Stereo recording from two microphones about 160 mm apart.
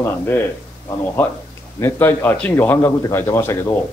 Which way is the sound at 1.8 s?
15° left (ahead or behind).